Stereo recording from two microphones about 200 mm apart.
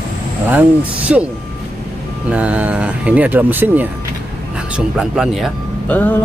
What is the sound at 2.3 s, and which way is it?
Speech, 5° right (ahead or behind).